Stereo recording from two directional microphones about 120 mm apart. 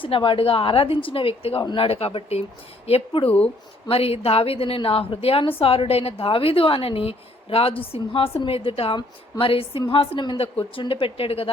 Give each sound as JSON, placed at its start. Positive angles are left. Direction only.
{"t": 0.0, "sound": "a woman's voice", "side_deg": 45}
{"t": 3.2, "sound": "speech", "side_deg": 10}
{"t": 3.8, "sound": "a woman's voice", "side_deg": 55}